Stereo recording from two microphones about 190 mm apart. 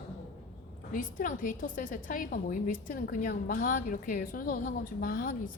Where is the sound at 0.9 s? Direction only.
45° left (ahead or behind).